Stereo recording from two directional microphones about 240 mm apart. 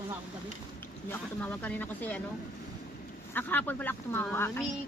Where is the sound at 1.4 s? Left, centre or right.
Centre.